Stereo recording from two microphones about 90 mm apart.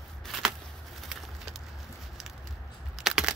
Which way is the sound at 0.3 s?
5° right (ahead or behind).